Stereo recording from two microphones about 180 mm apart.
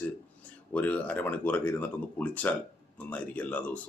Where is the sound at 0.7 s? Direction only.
10° left (ahead or behind).